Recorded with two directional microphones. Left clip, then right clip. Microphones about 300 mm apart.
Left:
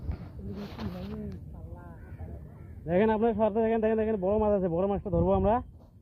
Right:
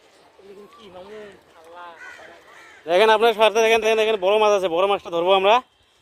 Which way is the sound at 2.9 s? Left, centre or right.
Right.